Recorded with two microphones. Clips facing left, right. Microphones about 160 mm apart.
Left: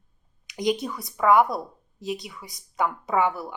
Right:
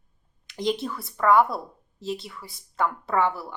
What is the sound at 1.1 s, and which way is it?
Speech, 5° left (ahead or behind).